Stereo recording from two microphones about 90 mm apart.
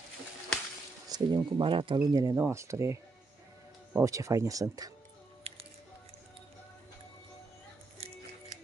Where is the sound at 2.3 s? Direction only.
30° right (ahead or behind).